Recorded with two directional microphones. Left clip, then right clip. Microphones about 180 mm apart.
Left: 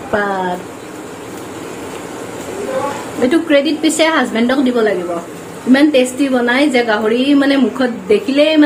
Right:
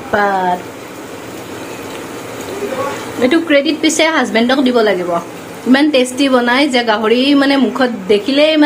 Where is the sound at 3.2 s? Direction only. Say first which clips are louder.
Right 1 dB; 15° right (ahead or behind).